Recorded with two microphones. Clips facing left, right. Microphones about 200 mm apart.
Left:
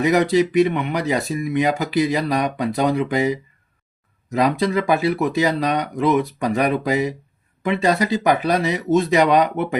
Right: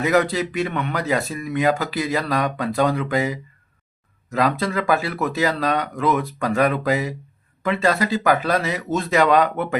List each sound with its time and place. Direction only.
0.0 s speech: 20° left (ahead or behind)